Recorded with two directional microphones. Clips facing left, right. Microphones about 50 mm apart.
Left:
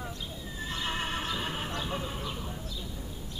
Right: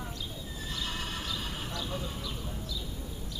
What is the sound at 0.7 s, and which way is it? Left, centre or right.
Neigh, left.